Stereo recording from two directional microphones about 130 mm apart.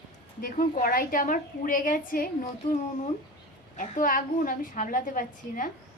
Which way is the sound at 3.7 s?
85° left.